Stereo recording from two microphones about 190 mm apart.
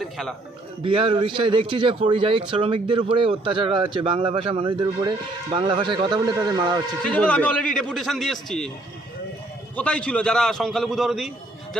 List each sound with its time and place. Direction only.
0.0 s a man's voice: centre (ahead or behind)
0.8 s a man's voice: 30° right (ahead or behind)
7.0 s a man's voice: 5° left (ahead or behind)
9.7 s a man's voice: 5° left (ahead or behind)